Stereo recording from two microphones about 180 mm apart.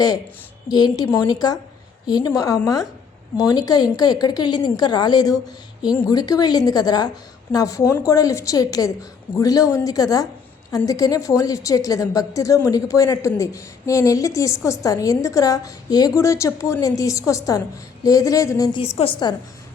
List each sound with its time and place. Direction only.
0.7 s a woman's voice: 25° left (ahead or behind)